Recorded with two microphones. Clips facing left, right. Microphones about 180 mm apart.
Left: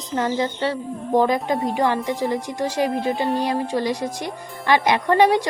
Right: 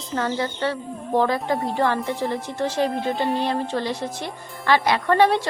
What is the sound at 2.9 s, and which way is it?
Music, 5° left (ahead or behind).